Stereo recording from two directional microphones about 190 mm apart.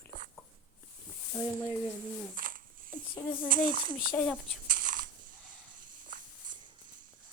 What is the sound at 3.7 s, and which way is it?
Speech, 25° right (ahead or behind).